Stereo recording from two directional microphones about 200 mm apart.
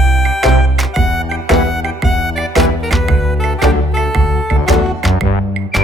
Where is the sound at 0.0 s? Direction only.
Centre (ahead or behind).